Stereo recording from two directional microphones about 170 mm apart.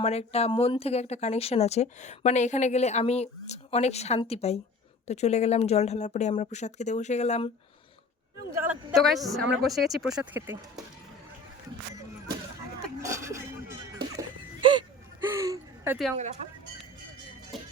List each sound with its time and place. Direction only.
0.0 s speech: 40° left (ahead or behind)
8.6 s speech: 5° right (ahead or behind)
13.0 s a sound: 15° right (ahead or behind)
14.2 s music: 25° right (ahead or behind)
15.4 s gasp: 15° right (ahead or behind)
17.5 s music: centre (ahead or behind)